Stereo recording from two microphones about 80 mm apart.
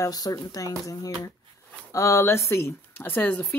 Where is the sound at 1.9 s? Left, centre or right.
Left.